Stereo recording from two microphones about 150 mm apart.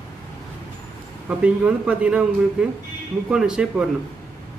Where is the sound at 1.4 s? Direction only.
10° right (ahead or behind).